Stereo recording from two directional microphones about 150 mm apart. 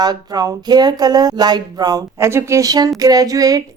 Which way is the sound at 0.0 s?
25° right (ahead or behind).